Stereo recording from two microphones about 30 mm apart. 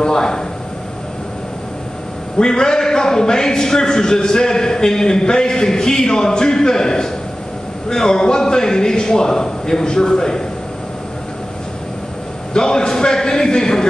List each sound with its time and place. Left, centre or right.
0.0 s a man's voice: left
2.3 s a man's voice: left
12.5 s a man's voice: left